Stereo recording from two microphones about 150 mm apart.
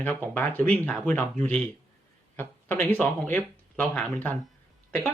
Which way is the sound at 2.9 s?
10° left (ahead or behind).